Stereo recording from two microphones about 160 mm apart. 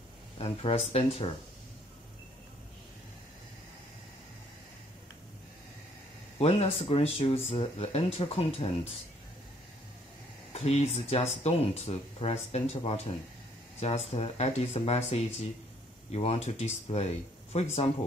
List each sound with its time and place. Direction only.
0.4 s speech: 40° left (ahead or behind)
6.3 s speech: 40° left (ahead or behind)
10.5 s speech: 40° left (ahead or behind)